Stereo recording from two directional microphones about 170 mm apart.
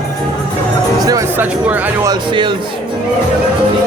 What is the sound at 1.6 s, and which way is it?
Speech, 10° right (ahead or behind).